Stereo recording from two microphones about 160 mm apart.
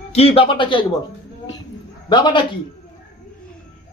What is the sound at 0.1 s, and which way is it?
Speech, 40° left (ahead or behind).